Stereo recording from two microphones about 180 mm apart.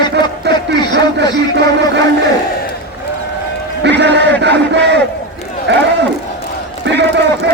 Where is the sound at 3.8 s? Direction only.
70° right (ahead or behind).